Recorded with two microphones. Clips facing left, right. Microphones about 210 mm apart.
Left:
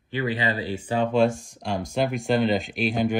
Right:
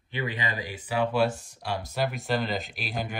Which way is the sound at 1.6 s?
50° left (ahead or behind).